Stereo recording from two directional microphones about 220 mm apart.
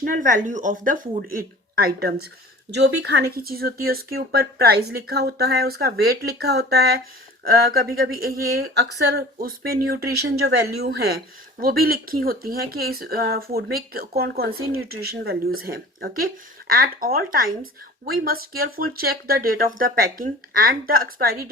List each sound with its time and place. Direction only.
0.0 s speech: 40° right (ahead or behind)